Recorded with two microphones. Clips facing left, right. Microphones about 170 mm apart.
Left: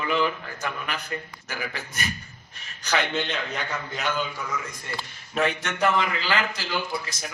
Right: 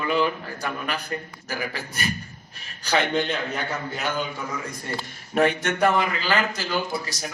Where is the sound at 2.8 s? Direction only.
35° right (ahead or behind).